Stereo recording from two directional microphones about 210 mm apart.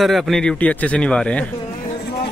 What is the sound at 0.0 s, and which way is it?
A man's voice, centre (ahead or behind).